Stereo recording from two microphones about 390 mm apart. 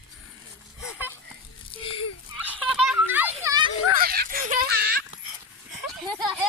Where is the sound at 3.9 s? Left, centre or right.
Right.